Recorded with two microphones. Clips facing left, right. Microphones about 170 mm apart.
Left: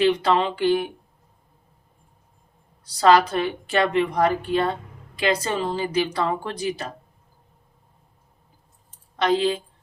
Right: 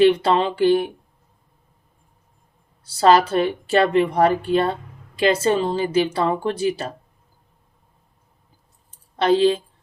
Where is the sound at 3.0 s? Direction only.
30° right (ahead or behind).